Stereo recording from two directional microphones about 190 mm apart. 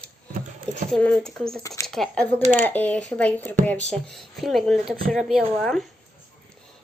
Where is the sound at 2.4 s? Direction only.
40° right (ahead or behind).